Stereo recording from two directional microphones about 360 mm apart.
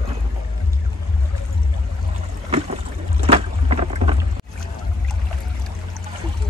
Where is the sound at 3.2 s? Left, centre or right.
Centre.